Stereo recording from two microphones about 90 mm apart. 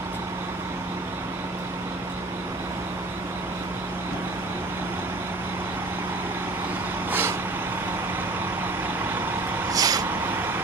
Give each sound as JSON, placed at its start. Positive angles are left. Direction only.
{"t": 7.1, "sound": "vehicle", "side_deg": -25}
{"t": 9.7, "sound": "vehicle", "side_deg": -45}